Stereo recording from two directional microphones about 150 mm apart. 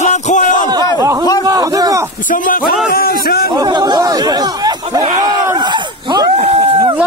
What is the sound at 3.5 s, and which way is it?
Chatter, 30° right (ahead or behind).